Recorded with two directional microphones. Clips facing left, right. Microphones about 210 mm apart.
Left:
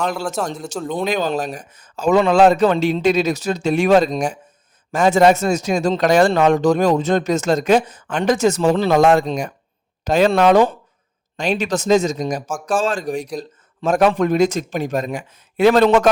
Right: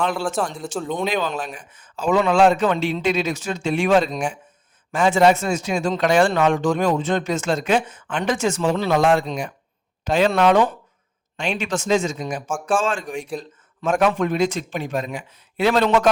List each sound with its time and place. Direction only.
0.6 s speech: centre (ahead or behind)
0.9 s speech: 40° left (ahead or behind)